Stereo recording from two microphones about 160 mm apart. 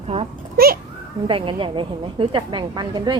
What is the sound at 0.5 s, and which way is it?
Speech, 70° right (ahead or behind).